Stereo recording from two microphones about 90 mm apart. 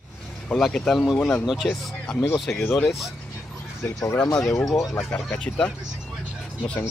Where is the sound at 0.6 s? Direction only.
5° left (ahead or behind).